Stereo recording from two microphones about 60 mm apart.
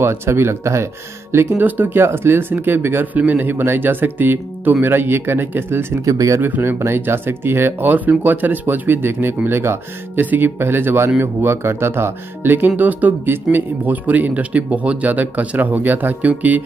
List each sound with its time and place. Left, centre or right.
0.0 s speech: right
1.6 s speech: right
2.0 s speech: right
6.0 s speech: right
6.4 s speech: right
6.8 s speech: right
7.9 s speech: right